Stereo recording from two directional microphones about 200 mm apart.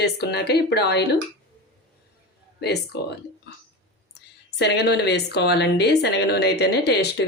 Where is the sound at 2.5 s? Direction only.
55° left (ahead or behind).